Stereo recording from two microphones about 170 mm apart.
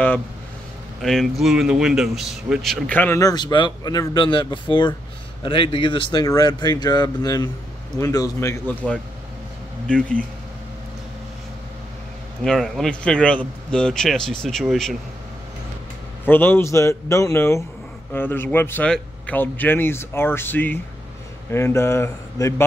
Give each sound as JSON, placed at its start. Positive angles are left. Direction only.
{"t": 1.0, "sound": "a man's voice", "side_deg": 0}
{"t": 9.8, "sound": "a man's voice", "side_deg": 5}
{"t": 12.4, "sound": "a man's voice", "side_deg": 0}
{"t": 16.3, "sound": "a man's voice", "side_deg": 10}